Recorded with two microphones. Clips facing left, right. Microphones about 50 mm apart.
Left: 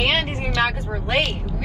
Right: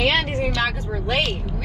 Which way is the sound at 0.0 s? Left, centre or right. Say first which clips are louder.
Right 1 dB; left.